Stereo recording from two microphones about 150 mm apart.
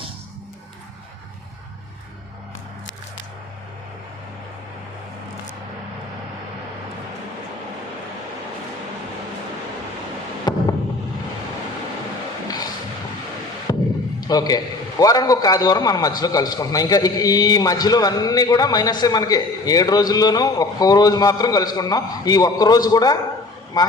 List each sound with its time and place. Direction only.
10.5 s fireworks: 30° left (ahead or behind)
13.7 s a sound: 25° left (ahead or behind)
14.2 s a man's voice: 25° left (ahead or behind)